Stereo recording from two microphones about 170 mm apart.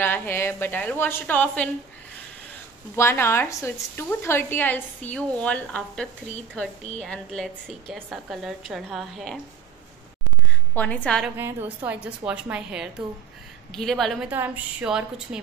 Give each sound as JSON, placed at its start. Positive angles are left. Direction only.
{"t": 0.0, "sound": "a woman's voice", "side_deg": 10}
{"t": 3.0, "sound": "a woman's voice", "side_deg": 15}
{"t": 10.7, "sound": "a woman's voice", "side_deg": 10}
{"t": 11.2, "sound": "a woman's voice", "side_deg": -10}
{"t": 14.3, "sound": "a woman's voice", "side_deg": -10}